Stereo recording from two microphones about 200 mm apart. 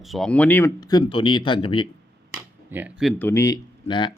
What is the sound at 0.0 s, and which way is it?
Speech, centre (ahead or behind).